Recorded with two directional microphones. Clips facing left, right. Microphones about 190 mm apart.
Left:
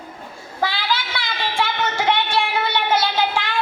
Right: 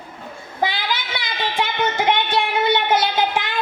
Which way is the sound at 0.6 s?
20° right (ahead or behind).